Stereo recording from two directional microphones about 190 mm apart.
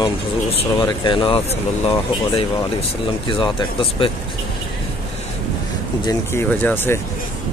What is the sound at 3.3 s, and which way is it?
Speech, 25° left (ahead or behind).